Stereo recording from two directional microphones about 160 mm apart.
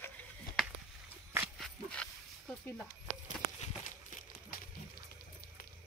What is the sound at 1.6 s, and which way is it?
Dog, 5° left (ahead or behind).